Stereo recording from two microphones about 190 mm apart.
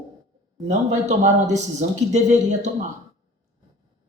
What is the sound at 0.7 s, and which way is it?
Speech, 40° right (ahead or behind).